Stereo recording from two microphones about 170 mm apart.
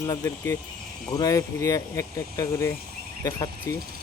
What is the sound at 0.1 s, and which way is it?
Speech, 20° left (ahead or behind).